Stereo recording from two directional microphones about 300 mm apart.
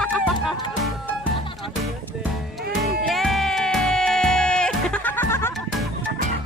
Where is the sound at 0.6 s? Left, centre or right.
Centre.